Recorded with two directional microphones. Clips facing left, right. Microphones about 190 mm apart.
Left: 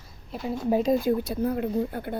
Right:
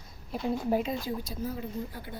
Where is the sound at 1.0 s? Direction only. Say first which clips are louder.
Left 10 dB; 60° left (ahead or behind).